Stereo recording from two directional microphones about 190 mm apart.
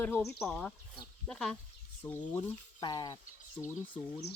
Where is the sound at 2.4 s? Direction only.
25° left (ahead or behind).